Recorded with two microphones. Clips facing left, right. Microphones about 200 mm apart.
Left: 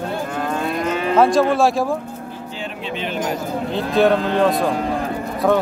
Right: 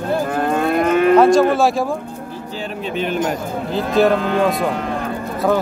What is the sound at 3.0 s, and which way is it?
Speech, 50° right (ahead or behind).